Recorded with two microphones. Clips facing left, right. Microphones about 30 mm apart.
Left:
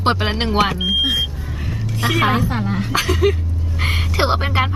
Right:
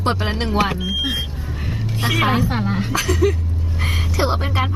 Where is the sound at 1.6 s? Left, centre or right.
Centre.